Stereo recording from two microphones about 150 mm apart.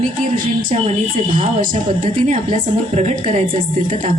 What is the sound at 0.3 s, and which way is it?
A woman's voice, 65° right (ahead or behind).